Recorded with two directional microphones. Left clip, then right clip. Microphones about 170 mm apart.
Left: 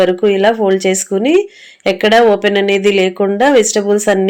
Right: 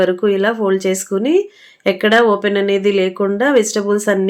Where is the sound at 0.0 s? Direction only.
10° left (ahead or behind).